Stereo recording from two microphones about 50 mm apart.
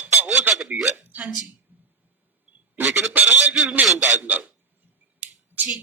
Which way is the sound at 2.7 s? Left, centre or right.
Right.